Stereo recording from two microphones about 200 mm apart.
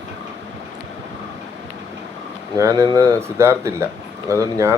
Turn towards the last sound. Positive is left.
turn(degrees=-15)  # may be behind; listen again after turning